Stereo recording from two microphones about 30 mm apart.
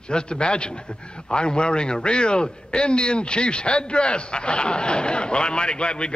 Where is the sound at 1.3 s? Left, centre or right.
Left.